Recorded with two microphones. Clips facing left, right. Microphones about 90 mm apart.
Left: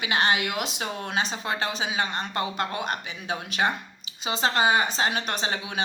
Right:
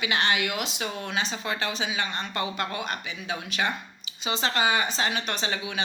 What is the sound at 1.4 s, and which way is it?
A woman's voice, 30° left (ahead or behind).